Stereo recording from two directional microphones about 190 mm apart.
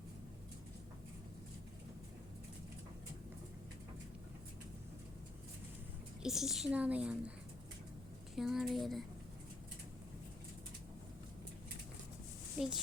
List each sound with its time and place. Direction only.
6.2 s a woman's voice: centre (ahead or behind)
8.4 s a woman's voice: centre (ahead or behind)
12.5 s speech: 5° right (ahead or behind)